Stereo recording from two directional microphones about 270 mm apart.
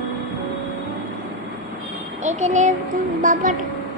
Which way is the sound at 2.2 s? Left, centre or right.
Right.